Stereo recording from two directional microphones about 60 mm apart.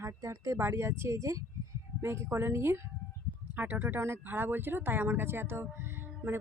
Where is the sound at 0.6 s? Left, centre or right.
Right.